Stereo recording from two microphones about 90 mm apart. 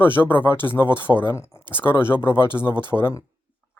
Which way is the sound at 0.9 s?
55° right (ahead or behind).